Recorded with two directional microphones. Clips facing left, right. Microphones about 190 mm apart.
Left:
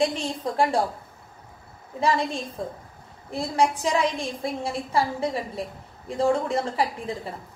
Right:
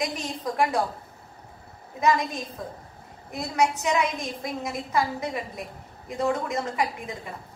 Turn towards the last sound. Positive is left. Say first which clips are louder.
# left 2 dB
turn(degrees=30)  # may be behind; listen again after turning